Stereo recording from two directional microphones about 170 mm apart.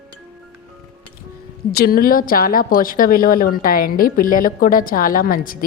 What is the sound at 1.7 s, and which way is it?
A woman's voice, 65° left (ahead or behind).